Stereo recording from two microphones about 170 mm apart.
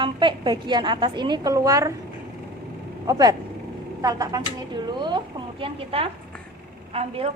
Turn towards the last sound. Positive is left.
turn(degrees=-35)  # may be behind; listen again after turning